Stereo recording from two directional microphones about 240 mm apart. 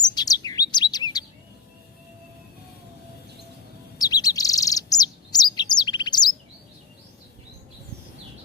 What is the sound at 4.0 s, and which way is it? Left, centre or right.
Chirp, centre.